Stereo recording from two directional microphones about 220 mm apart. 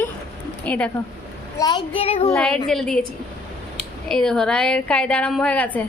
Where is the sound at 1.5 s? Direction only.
15° left (ahead or behind).